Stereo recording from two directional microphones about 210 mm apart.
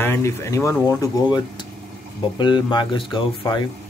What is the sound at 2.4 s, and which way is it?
Speech, 20° left (ahead or behind).